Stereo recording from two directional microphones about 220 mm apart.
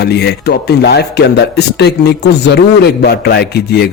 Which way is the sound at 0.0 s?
50° left (ahead or behind).